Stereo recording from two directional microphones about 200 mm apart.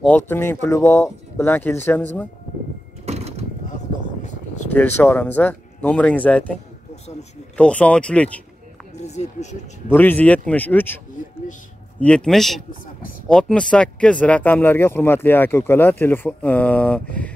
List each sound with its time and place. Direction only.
0.3 s speech: 15° left (ahead or behind)
3.1 s mechanisms: 30° right (ahead or behind)
4.7 s speech: 10° left (ahead or behind)
9.0 s speech: 35° left (ahead or behind)
9.8 s speech: 10° left (ahead or behind)
12.0 s speech: 5° left (ahead or behind)